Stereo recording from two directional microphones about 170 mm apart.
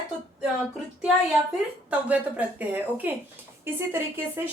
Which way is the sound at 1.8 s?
10° right (ahead or behind).